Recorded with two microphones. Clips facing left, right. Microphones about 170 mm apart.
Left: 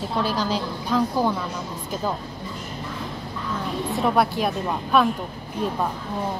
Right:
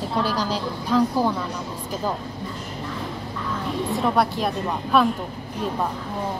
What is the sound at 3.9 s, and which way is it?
A woman's voice, centre (ahead or behind).